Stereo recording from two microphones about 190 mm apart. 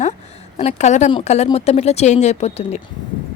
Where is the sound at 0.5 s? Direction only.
35° left (ahead or behind).